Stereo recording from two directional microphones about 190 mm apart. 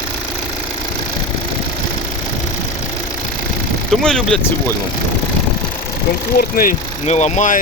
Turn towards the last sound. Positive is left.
turn(degrees=40)  # may be behind; listen again after turning